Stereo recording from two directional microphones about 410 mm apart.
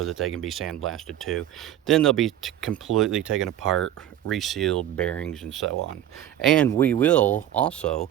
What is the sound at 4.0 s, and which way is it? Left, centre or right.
Speech, centre.